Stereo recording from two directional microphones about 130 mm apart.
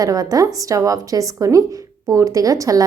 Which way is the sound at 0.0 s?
30° right (ahead or behind).